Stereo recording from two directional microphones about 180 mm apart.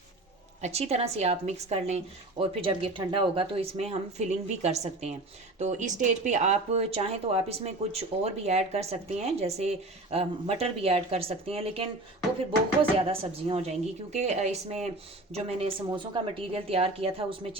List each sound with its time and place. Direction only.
0.6 s speech: 35° right (ahead or behind)
13.0 s speech: 35° right (ahead or behind)